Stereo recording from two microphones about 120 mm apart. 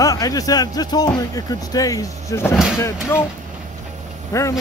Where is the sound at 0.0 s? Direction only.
30° left (ahead or behind).